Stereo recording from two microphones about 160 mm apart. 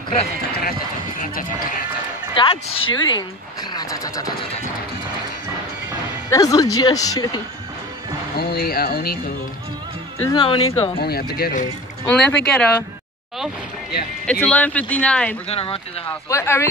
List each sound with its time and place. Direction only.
0.6 s run: 65° left (ahead or behind)
2.3 s a woman's voice: 30° left (ahead or behind)
6.3 s a woman's voice: 20° left (ahead or behind)
8.4 s speech: 75° left (ahead or behind)
10.3 s a woman's voice: 30° left (ahead or behind)
11.0 s speech: 75° left (ahead or behind)
12.1 s speech: 5° left (ahead or behind)
14.2 s speech: 10° left (ahead or behind)
15.4 s speech: 35° left (ahead or behind)
16.1 s speech: 15° left (ahead or behind)